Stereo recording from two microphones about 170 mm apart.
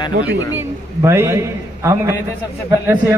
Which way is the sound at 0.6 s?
15° right (ahead or behind).